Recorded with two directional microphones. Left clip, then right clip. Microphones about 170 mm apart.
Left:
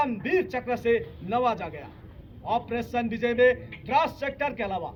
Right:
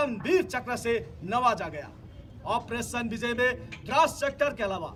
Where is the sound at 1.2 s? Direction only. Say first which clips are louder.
Right 3 dB; 35° right (ahead or behind).